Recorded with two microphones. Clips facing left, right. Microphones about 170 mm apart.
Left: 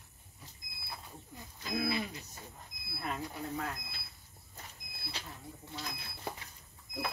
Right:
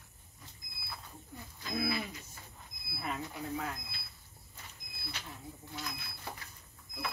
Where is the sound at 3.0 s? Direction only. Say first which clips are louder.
Even; centre (ahead or behind).